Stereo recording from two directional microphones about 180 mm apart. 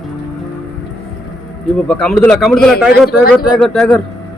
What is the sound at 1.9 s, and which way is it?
A man's voice, 5° left (ahead or behind).